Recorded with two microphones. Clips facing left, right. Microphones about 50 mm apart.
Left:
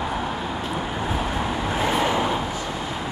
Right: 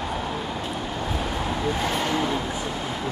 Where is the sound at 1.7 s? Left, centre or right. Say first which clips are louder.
Left 5 dB; centre.